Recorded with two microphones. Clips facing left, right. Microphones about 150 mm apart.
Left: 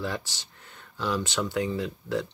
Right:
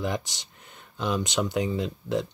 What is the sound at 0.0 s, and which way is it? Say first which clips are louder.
Speech: right 3 dB; 15° right (ahead or behind).